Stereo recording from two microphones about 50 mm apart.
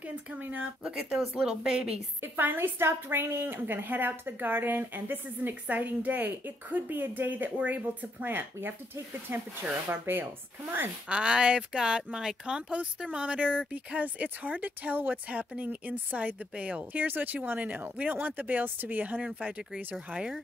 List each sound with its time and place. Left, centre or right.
0.4 s a woman's voice: right
1.4 s a woman's voice: centre
2.2 s a woman's voice: right
8.3 s speech: right
11.1 s a woman's voice: centre
16.5 s speech: right
16.9 s a woman's voice: right